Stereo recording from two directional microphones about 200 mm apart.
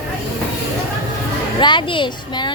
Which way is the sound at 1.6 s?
25° left (ahead or behind).